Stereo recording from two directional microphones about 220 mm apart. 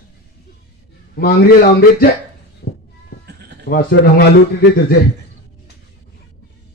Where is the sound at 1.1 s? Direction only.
45° left (ahead or behind).